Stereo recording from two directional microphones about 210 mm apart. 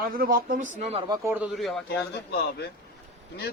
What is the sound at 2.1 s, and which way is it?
Speech, 50° left (ahead or behind).